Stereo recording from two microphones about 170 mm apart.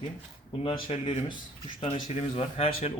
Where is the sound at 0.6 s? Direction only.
30° left (ahead or behind).